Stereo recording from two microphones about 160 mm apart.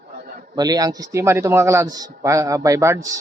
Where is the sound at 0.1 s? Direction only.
85° right.